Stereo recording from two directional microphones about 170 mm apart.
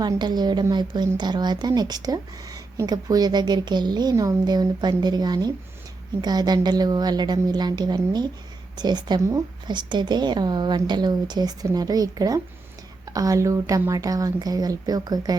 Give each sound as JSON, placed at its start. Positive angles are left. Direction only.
{"t": 0.0, "sound": "a woman's voice", "side_deg": -25}